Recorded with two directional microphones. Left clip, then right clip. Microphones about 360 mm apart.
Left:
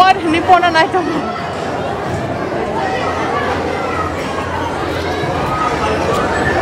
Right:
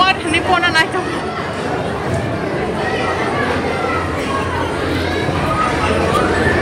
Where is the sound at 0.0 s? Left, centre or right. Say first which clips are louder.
Left 4 dB; left.